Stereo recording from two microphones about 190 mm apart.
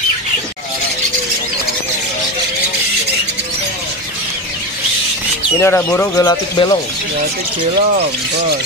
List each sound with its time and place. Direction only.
5.6 s speech: 15° left (ahead or behind)